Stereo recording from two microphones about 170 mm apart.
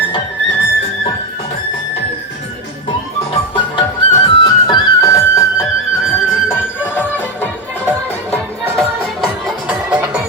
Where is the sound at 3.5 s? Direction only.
25° left (ahead or behind).